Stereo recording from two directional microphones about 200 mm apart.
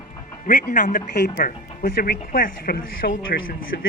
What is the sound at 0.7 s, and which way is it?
Speech, 40° left (ahead or behind).